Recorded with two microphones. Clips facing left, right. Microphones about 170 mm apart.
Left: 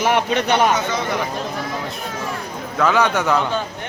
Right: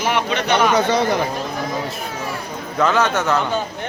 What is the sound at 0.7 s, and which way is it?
Speech, 35° right (ahead or behind).